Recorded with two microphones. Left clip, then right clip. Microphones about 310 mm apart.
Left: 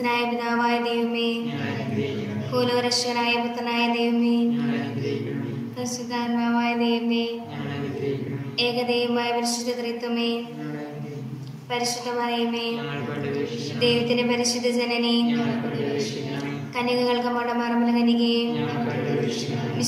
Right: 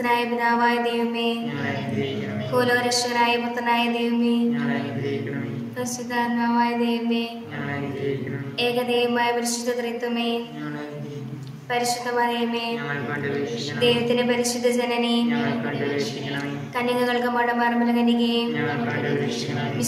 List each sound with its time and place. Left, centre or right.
0.0 s a woman's voice: right
2.5 s a woman's voice: right
6.1 s a woman's voice: right
8.5 s a woman's voice: right
11.7 s a woman's voice: right
13.8 s a woman's voice: right
16.7 s a woman's voice: right